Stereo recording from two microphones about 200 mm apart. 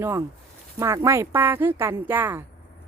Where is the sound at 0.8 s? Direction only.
15° right (ahead or behind).